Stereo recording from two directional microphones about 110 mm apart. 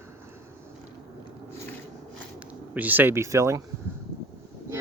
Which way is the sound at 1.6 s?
20° left (ahead or behind).